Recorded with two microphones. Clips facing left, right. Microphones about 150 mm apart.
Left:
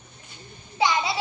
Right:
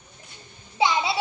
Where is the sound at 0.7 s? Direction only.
25° right (ahead or behind).